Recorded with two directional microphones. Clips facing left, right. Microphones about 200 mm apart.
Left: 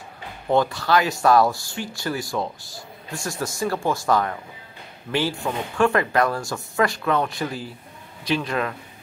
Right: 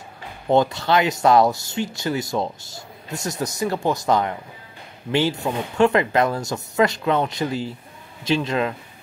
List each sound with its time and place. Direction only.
0.5 s speech: 25° right (ahead or behind)